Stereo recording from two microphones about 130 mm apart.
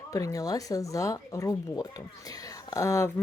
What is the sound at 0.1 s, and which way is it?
Speech, 25° left (ahead or behind).